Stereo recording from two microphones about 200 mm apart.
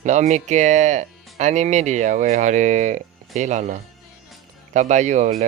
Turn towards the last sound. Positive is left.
turn(degrees=-40)  # may be behind; listen again after turning